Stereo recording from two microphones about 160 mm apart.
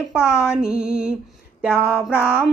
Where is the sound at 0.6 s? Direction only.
5° right (ahead or behind).